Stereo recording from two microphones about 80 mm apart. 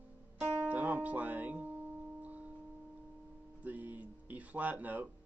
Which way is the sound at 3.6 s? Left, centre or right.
Right.